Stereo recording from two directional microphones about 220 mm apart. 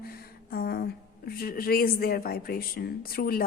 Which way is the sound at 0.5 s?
45° left (ahead or behind).